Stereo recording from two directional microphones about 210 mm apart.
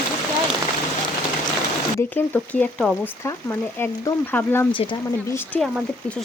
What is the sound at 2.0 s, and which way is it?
Speech, 10° left (ahead or behind).